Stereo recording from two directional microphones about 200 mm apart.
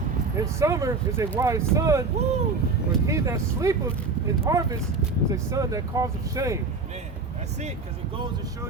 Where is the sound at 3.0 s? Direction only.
15° right (ahead or behind).